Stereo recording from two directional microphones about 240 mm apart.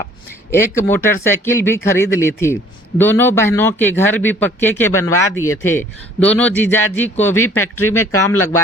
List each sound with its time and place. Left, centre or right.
0.5 s a man's voice: centre
7.3 s speech: left
7.6 s a man's voice: centre